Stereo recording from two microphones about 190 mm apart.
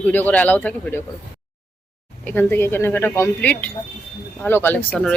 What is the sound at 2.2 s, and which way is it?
Speech, 10° left (ahead or behind).